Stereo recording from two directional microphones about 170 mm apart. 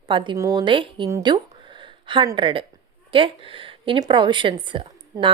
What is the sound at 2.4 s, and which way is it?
A woman's voice, 30° right (ahead or behind).